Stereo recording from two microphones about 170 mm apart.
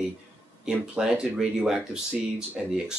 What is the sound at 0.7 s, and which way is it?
Speech, 5° right (ahead or behind).